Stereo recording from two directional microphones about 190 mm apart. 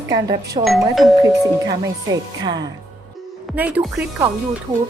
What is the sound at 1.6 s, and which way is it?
Speech, 20° right (ahead or behind).